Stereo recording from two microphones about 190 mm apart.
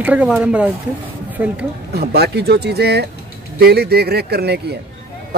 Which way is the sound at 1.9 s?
55° right (ahead or behind).